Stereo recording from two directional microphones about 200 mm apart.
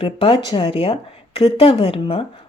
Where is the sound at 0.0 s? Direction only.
25° left (ahead or behind).